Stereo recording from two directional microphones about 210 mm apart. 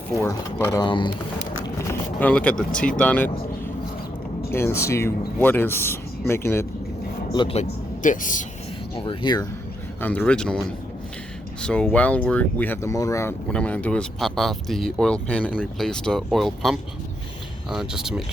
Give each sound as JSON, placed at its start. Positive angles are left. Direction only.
{"t": 0.3, "sound": "speech", "side_deg": 15}
{"t": 1.8, "sound": "speech", "side_deg": 10}
{"t": 4.5, "sound": "speech", "side_deg": 10}
{"t": 7.3, "sound": "speech", "side_deg": 30}
{"t": 9.0, "sound": "speech", "side_deg": 20}
{"t": 10.0, "sound": "speech", "side_deg": 10}